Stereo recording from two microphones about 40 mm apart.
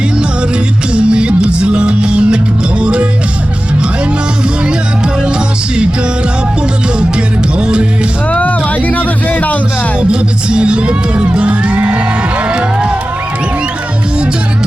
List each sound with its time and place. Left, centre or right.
0.9 s music: right
7.6 s music: right
8.3 s music: left
10.0 s music: right